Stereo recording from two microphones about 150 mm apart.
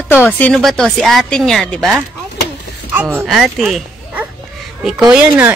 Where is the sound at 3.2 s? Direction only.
Centre (ahead or behind).